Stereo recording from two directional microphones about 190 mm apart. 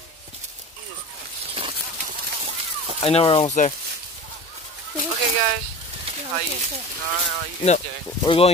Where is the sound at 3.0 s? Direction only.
30° left (ahead or behind).